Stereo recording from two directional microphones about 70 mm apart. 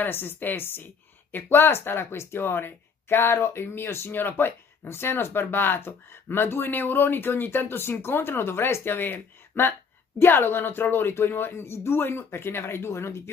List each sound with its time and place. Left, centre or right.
0.0 s speech: left